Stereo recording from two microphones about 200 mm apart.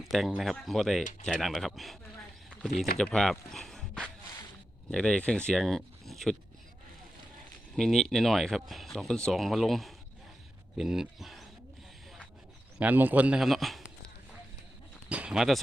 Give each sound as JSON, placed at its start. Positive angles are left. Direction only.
{"t": 0.0, "sound": "speech", "side_deg": 0}
{"t": 3.0, "sound": "speech", "side_deg": 5}
{"t": 7.8, "sound": "speech", "side_deg": 0}
{"t": 12.8, "sound": "speech", "side_deg": -10}
{"t": 15.1, "sound": "speech", "side_deg": -5}